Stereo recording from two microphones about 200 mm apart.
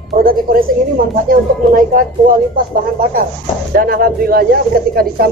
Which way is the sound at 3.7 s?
45° right (ahead or behind).